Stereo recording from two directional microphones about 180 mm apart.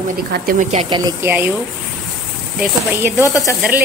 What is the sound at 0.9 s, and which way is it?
Speech, 20° right (ahead or behind).